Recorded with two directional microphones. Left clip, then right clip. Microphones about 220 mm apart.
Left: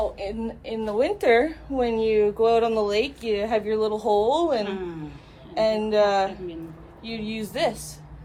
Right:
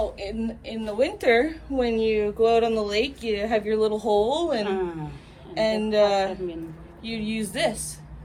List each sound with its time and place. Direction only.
0.4 s a woman's voice: 40° left (ahead or behind)
2.0 s speech: 25° left (ahead or behind)
4.6 s speech: 5° left (ahead or behind)
5.5 s speech: 25° left (ahead or behind)